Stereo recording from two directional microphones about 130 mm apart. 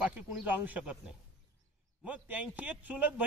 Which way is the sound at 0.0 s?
5° right (ahead or behind).